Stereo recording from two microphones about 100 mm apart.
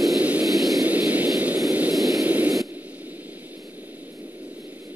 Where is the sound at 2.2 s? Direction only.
15° right (ahead or behind).